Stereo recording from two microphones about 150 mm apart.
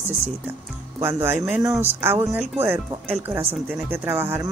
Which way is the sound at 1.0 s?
15° right (ahead or behind).